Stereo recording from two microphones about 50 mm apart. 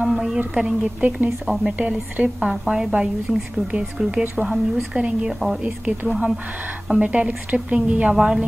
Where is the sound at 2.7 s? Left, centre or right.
Centre.